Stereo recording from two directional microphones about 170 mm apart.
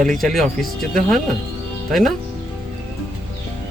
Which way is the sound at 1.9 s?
Centre (ahead or behind).